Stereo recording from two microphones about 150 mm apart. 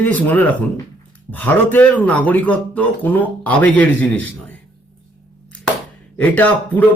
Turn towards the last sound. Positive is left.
turn(degrees=10)  # may be behind; listen again after turning